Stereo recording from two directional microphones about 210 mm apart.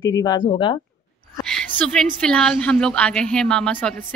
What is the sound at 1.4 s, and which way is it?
A woman's voice, 5° left (ahead or behind).